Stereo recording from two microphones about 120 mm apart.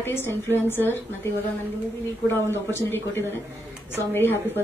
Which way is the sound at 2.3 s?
20° left (ahead or behind).